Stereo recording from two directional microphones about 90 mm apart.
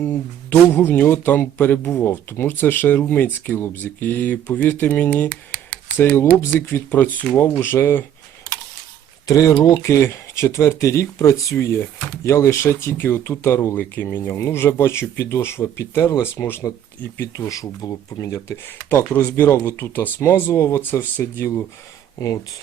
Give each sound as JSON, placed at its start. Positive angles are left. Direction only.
{"t": 0.5, "sound": "speech", "side_deg": 25}
{"t": 6.4, "sound": "speech", "side_deg": 25}
{"t": 9.2, "sound": "speech", "side_deg": 40}